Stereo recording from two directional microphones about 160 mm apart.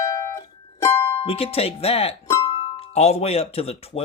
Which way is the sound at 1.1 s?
40° left (ahead or behind).